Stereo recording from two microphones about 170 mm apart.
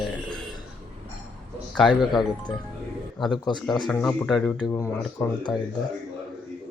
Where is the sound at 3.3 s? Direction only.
25° left (ahead or behind).